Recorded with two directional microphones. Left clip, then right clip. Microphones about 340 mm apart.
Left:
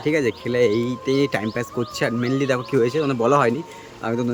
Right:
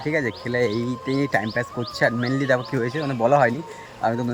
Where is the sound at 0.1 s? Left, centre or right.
Centre.